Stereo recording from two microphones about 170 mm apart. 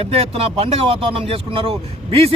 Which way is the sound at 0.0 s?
35° right (ahead or behind).